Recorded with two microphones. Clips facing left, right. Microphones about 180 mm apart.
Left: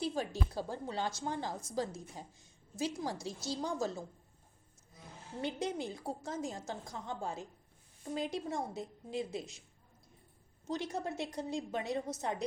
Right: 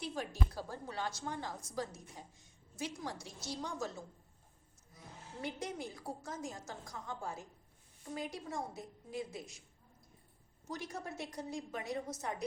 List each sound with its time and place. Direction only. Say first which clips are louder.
0.0 s a woman's voice: left 4 dB; 30° left (ahead or behind)
5.4 s a woman's voice: left 5 dB; 25° left (ahead or behind)
10.7 s a woman's voice: left 6 dB; 25° left (ahead or behind)